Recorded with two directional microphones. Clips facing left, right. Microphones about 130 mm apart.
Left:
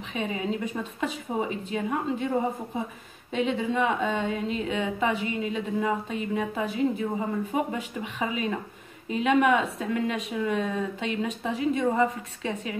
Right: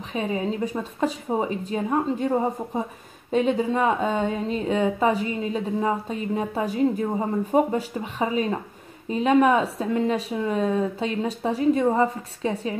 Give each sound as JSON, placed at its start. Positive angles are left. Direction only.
{"t": 0.1, "sound": "a woman's voice", "side_deg": -35}